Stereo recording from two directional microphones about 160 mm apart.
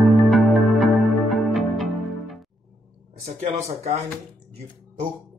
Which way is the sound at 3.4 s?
45° right (ahead or behind).